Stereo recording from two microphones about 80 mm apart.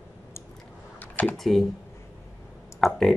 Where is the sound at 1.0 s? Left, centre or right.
Left.